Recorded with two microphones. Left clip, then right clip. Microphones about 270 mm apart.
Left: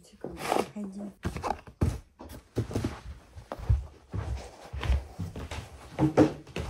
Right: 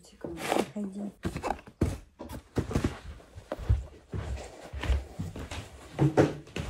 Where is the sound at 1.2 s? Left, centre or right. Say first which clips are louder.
Left 1 dB; centre.